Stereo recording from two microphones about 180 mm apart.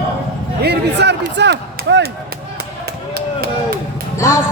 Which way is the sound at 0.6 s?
65° right (ahead or behind).